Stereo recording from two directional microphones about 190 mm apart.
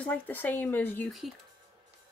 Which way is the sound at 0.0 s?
10° left (ahead or behind).